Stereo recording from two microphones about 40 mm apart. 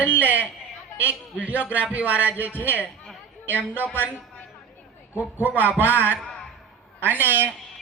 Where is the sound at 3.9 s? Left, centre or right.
Right.